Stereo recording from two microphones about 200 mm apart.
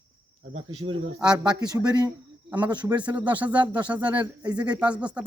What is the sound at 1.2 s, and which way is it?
Speech, 5° right (ahead or behind).